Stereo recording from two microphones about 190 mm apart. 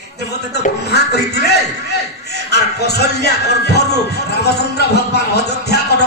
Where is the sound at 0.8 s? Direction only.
60° left (ahead or behind).